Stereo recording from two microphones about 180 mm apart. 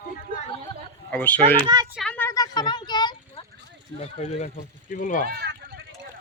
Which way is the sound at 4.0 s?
40° left (ahead or behind).